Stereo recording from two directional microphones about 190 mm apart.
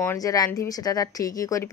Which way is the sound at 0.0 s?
15° left (ahead or behind).